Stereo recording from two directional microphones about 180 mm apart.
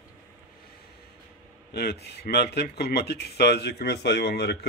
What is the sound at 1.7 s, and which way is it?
Speech, 60° left (ahead or behind).